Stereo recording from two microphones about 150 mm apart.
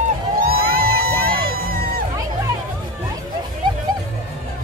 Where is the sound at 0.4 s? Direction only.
85° right.